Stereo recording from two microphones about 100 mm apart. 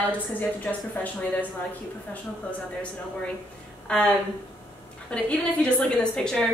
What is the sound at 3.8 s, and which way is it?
A woman's voice, 10° left (ahead or behind).